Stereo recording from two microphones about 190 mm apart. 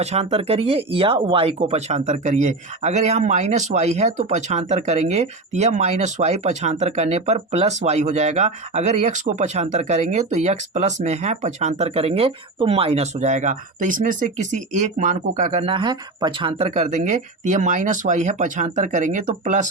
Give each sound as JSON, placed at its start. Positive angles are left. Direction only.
{"t": 0.0, "sound": "speech", "side_deg": -35}